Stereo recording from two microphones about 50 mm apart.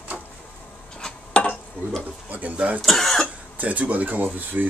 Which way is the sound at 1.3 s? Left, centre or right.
Left.